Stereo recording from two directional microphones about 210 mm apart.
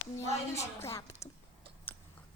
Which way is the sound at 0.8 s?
15° left (ahead or behind).